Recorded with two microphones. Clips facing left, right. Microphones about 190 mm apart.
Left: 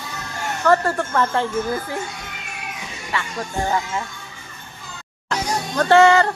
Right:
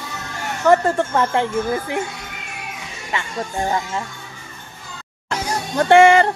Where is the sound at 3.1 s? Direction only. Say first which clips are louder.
Right 1 dB; 20° right (ahead or behind).